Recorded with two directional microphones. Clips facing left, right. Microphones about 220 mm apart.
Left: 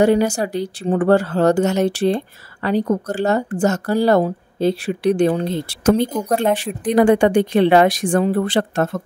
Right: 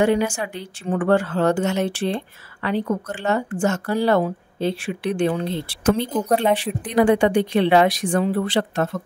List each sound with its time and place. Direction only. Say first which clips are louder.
0.0 s speech: left 4 dB; 40° left (ahead or behind)
6.2 s speech: left 1 dB; 5° left (ahead or behind)
6.6 s a woman's voice: left 4 dB; 45° left (ahead or behind)